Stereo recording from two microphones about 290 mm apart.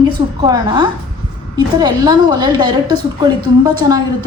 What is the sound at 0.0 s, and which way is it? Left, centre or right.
A woman's voice, centre.